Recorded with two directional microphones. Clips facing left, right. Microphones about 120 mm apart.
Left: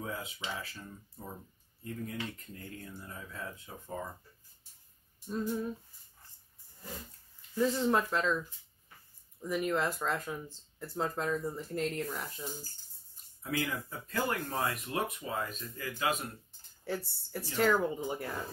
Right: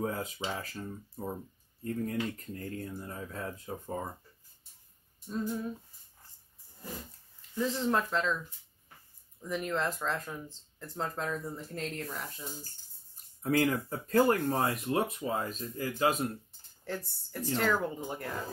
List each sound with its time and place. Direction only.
0.0 s speech: 40° right (ahead or behind)
5.3 s speech: centre (ahead or behind)
7.5 s speech: 5° left (ahead or behind)
13.4 s speech: 40° right (ahead or behind)
16.8 s speech: 5° left (ahead or behind)